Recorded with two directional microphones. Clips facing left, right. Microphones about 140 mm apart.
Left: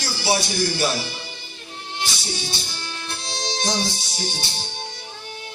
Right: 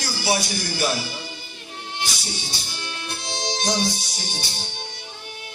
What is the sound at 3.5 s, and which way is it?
Music, 25° left (ahead or behind).